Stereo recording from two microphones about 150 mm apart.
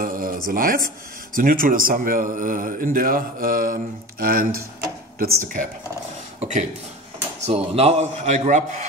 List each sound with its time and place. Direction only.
0.0 s a sound: 65° right (ahead or behind)
0.5 s a man's voice: 70° right (ahead or behind)
5.2 s speech: 65° right (ahead or behind)
7.3 s speech: 45° right (ahead or behind)